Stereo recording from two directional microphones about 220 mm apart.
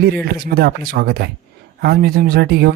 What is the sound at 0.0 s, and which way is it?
Speech, 45° right (ahead or behind).